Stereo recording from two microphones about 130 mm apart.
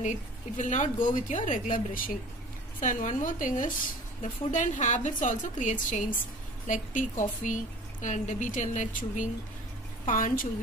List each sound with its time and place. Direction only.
0.0 s a woman's voice: 70° left (ahead or behind); by 2.1 s 90° left
2.8 s a woman's voice: 80° left
4.2 s speech: 75° left (ahead or behind)
10.0 s a woman's voice: 90° left